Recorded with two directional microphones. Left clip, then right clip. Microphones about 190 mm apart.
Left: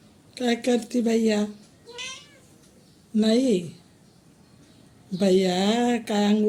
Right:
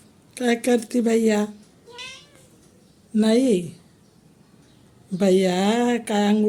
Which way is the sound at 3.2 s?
15° right (ahead or behind).